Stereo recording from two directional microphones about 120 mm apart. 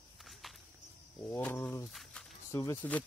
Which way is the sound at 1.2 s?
20° left (ahead or behind).